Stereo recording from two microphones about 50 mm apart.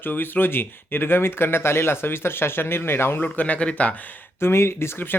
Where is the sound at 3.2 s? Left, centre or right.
Left.